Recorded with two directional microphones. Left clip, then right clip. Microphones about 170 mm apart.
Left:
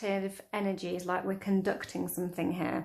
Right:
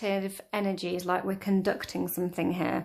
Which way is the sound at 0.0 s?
25° right (ahead or behind).